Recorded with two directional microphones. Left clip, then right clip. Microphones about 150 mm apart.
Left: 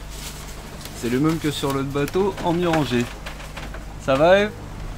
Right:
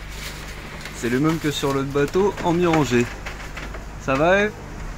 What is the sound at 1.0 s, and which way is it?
Speech, centre (ahead or behind).